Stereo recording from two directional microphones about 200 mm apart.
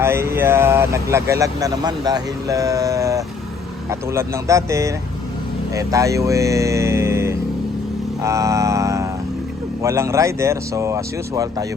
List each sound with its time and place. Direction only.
0.0 s speech: 15° right (ahead or behind)
8.2 s mantra: 15° right (ahead or behind)
9.8 s speech: 15° right (ahead or behind)